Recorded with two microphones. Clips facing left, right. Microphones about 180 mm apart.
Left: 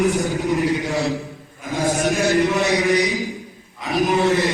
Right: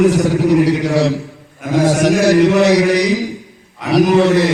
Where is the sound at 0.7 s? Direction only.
70° right (ahead or behind).